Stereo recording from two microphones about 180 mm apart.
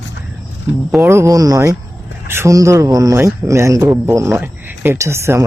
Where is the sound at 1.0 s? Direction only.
15° right (ahead or behind).